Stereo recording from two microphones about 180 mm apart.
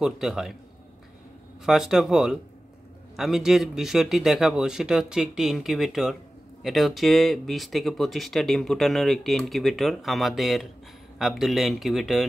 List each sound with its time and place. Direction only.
0.0 s speech: centre (ahead or behind)
1.7 s speech: centre (ahead or behind)